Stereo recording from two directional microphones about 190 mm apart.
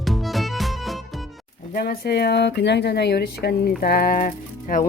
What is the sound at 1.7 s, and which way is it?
A woman's voice, 55° left (ahead or behind).